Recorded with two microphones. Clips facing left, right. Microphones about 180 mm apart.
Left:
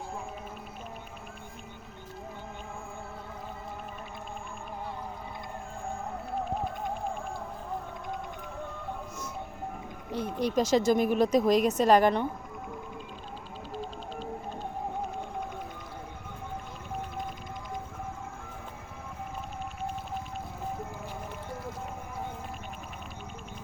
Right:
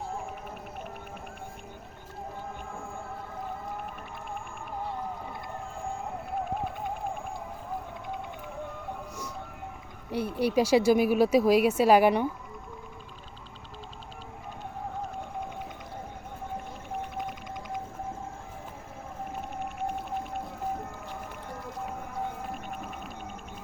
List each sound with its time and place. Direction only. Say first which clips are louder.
10.1 s speech: right 2 dB; 10° right (ahead or behind)
19.8 s whale vocalization: right 3 dB; 55° right (ahead or behind)